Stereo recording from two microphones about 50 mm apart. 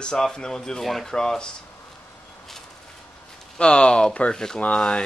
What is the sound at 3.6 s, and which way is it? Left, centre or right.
Speech, centre.